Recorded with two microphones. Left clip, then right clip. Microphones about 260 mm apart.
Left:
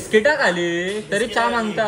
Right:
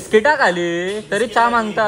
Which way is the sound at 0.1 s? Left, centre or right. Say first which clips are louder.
Right 3 dB; right.